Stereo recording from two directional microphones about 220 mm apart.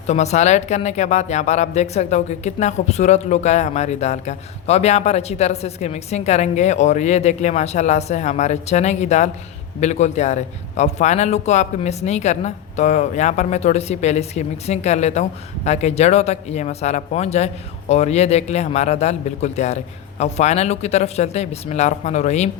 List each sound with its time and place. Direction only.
0.1 s a man's voice: 30° left (ahead or behind)